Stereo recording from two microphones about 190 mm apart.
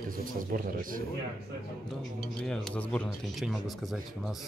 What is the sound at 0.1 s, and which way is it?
Speech, 45° right (ahead or behind).